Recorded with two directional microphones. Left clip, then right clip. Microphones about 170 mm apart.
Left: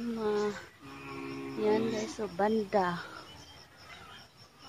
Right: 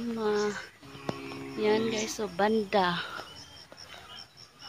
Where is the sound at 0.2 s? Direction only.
30° right (ahead or behind).